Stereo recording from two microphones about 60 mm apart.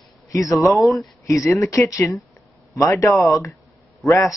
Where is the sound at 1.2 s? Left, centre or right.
Left.